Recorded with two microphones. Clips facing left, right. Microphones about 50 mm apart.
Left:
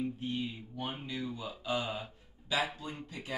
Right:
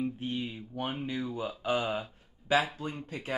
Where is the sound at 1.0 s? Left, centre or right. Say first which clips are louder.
Right 5 dB; right.